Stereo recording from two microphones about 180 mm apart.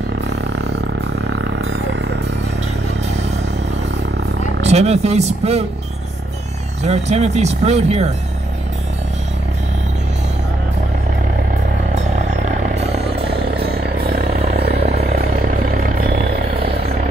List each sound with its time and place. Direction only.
0.3 s music: 70° right (ahead or behind)
4.6 s speech: 35° right (ahead or behind)
6.8 s speech: 40° right (ahead or behind)
11.9 s vehicle: 40° right (ahead or behind)
13.0 s vehicle: 60° right (ahead or behind)